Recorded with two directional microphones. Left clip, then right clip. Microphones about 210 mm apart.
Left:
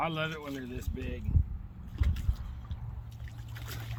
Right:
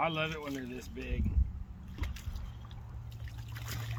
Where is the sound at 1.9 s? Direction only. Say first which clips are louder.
Left 2 dB; 25° right (ahead or behind).